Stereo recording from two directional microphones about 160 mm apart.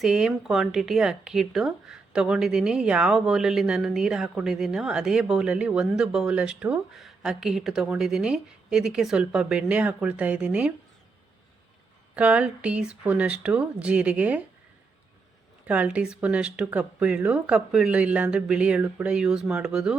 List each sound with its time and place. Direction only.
0.0 s speech: 5° right (ahead or behind)
12.1 s speech: 5° right (ahead or behind)
15.6 s speech: 10° right (ahead or behind)